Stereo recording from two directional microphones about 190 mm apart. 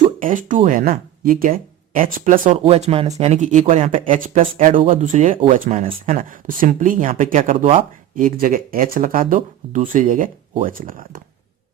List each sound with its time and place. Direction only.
0.2 s speech: 45° right (ahead or behind)
7.5 s speech: 30° right (ahead or behind)
8.1 s speech: 45° right (ahead or behind)